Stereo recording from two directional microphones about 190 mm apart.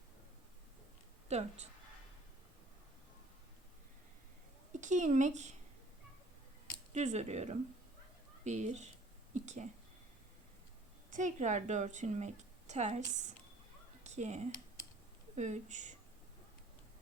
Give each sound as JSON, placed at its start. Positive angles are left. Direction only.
{"t": 1.3, "sound": "a woman's voice", "side_deg": -35}
{"t": 4.7, "sound": "speech", "side_deg": -40}
{"t": 6.9, "sound": "a woman's voice", "side_deg": -35}
{"t": 11.1, "sound": "a woman's voice", "side_deg": -40}
{"t": 14.0, "sound": "a sound", "side_deg": -35}
{"t": 15.4, "sound": "a woman's voice", "side_deg": -40}